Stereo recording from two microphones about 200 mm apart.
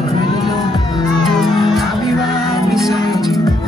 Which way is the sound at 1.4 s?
Centre (ahead or behind).